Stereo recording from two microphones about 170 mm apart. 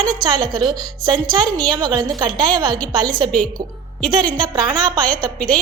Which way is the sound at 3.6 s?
65° right (ahead or behind).